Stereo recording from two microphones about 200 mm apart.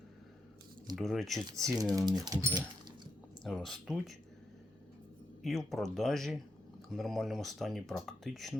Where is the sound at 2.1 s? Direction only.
20° right (ahead or behind).